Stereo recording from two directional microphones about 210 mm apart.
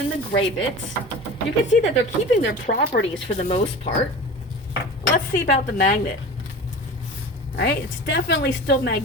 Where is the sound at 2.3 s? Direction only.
50° left (ahead or behind).